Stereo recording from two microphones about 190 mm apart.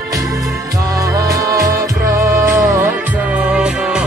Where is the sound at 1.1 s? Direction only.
15° right (ahead or behind).